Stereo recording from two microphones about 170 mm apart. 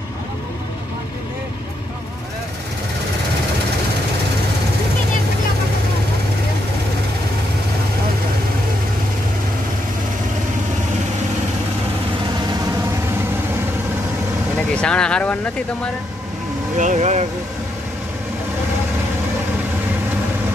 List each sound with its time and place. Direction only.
14.7 s speech: 5° left (ahead or behind)
16.7 s vehicle: 45° right (ahead or behind)